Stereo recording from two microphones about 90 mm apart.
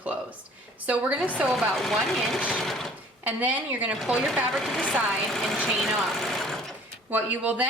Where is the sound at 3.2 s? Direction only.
20° right (ahead or behind).